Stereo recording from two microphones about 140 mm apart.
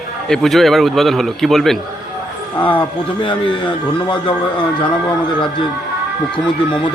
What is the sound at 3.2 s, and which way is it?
Speech, 35° left (ahead or behind).